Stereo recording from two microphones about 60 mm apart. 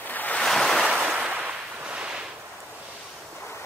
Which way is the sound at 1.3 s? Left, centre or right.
Right.